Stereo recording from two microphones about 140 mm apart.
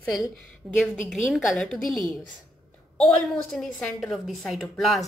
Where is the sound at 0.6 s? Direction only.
10° right (ahead or behind).